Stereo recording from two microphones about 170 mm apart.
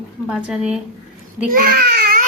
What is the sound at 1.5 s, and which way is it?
Baby cry, 55° right (ahead or behind).